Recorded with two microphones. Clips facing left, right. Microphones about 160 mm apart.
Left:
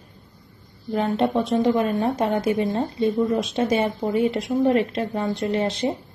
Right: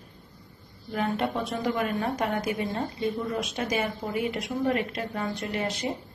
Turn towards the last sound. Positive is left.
turn(degrees=25)  # may be behind; listen again after turning